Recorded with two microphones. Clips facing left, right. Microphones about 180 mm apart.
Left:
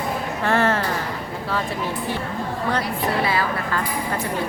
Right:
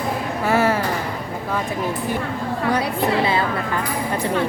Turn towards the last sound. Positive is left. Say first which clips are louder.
# right 2 dB
turn(degrees=-25)  # may be behind; listen again after turning